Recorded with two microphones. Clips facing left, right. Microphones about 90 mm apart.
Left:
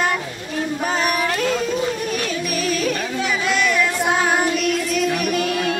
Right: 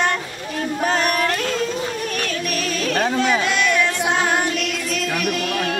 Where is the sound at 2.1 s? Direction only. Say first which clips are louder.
Left 1 dB; 5° left (ahead or behind).